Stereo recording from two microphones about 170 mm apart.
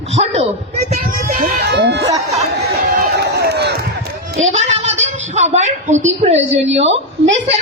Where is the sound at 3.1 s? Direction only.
75° right (ahead or behind).